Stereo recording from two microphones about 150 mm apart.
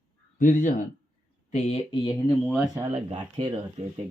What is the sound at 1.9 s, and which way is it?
Speech, 30° left (ahead or behind).